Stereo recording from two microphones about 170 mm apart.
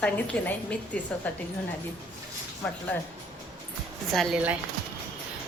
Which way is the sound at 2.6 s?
10° left (ahead or behind).